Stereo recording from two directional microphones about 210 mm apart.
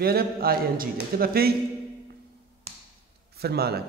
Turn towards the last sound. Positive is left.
turn(degrees=-50)  # may be behind; listen again after turning